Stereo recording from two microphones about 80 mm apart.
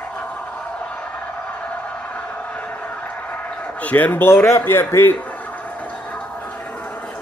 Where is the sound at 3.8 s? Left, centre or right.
Centre.